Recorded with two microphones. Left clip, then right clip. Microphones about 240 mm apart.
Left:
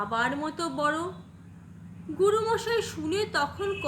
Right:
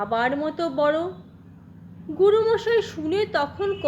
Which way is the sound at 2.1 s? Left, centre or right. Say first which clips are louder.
Right 6 dB; centre.